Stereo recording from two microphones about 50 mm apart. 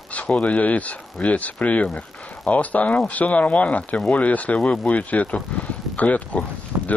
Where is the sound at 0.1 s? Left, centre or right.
Left.